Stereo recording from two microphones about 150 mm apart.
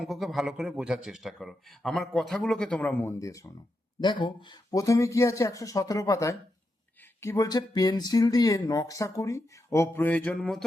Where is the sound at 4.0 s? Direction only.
35° left (ahead or behind).